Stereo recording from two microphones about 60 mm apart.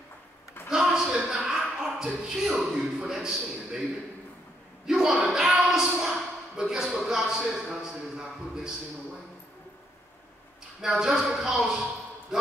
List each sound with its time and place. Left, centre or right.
0.7 s a woman's voice: centre
4.8 s speech: centre
10.8 s a man's voice: centre